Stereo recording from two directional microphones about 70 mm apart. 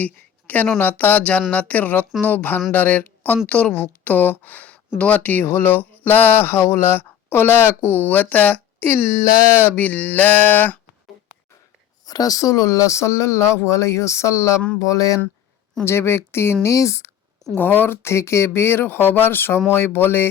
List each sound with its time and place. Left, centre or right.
0.0 s a woman's voice: left
8.9 s speech: left
12.0 s speech: left
14.8 s speech: left
15.8 s speech: left
16.6 s speech: left
17.6 s speech: left